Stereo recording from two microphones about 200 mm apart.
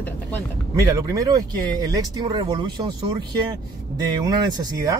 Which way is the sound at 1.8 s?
20° right (ahead or behind).